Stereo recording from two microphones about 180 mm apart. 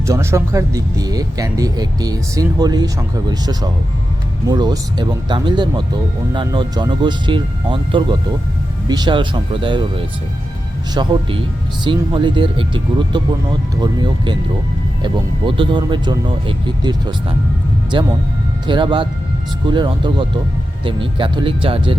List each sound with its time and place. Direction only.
0.0 s speech: 15° right (ahead or behind)
10.9 s speech: 25° right (ahead or behind)